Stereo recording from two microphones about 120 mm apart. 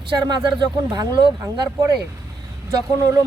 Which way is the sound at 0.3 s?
35° right (ahead or behind).